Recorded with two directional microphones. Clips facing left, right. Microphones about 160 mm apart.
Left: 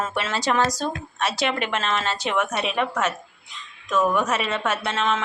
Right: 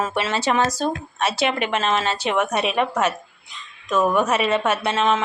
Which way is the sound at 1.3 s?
5° right (ahead or behind).